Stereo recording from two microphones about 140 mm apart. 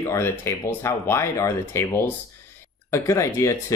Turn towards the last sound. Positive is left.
turn(degrees=20)  # may be behind; listen again after turning